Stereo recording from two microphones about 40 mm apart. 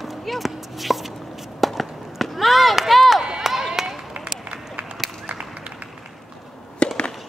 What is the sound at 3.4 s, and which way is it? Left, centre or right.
Run, centre.